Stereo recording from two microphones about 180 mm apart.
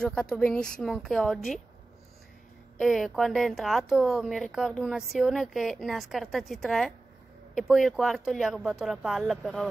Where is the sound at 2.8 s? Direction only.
Centre (ahead or behind).